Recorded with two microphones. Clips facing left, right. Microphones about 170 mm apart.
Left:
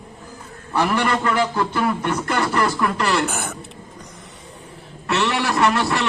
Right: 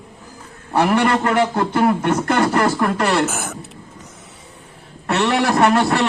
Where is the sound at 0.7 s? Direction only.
60° right (ahead or behind).